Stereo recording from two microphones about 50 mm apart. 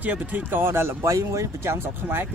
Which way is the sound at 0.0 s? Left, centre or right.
Right.